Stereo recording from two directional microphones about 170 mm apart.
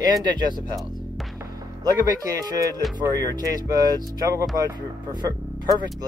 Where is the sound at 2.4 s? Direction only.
20° right (ahead or behind).